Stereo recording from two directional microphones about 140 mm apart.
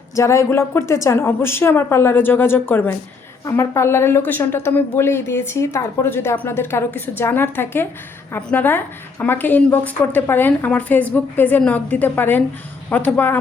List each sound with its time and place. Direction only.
0.2 s a woman's voice: 20° left (ahead or behind)